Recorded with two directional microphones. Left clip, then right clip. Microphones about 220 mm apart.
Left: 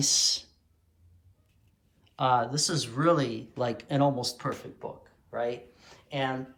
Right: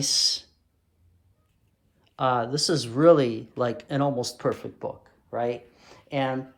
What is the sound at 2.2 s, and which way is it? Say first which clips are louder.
Speech: right 1 dB; 10° right (ahead or behind).